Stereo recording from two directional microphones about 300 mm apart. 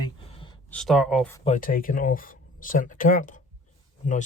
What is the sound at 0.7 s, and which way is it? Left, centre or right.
Speech, centre.